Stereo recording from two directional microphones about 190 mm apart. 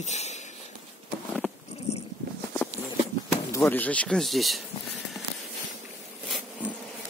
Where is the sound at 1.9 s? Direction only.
35° left (ahead or behind).